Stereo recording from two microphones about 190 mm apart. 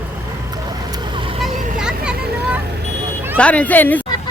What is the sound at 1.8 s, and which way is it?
Vehicle, 5° right (ahead or behind).